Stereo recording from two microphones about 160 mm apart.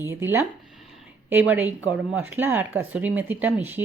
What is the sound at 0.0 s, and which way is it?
Speech, 15° right (ahead or behind).